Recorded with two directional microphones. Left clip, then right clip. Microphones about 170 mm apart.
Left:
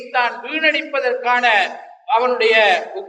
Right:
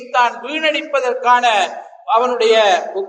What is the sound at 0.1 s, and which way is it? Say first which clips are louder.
A man's voice: right 3 dB; 25° right (ahead or behind).